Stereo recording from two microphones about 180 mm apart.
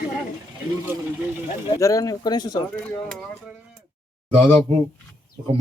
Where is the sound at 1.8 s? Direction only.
20° left (ahead or behind).